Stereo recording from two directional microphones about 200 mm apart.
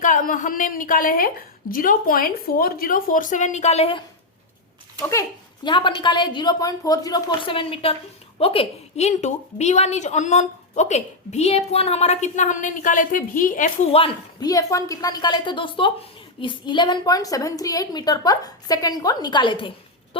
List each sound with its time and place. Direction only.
0.0 s a woman's voice: 40° left (ahead or behind)
5.6 s a woman's voice: 25° left (ahead or behind); by 13.7 s 40° left (ahead or behind)
13.9 s a woman's voice: 25° left (ahead or behind)